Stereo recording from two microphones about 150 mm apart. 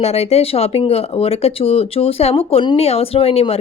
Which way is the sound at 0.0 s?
45° left (ahead or behind).